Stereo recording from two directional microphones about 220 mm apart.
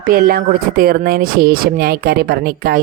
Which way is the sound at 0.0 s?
40° right (ahead or behind).